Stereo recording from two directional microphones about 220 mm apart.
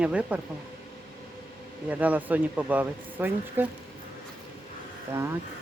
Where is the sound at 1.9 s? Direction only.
5° right (ahead or behind).